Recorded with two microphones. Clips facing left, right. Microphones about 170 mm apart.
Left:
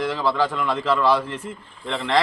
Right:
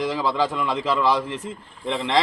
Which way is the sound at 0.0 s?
15° right (ahead or behind).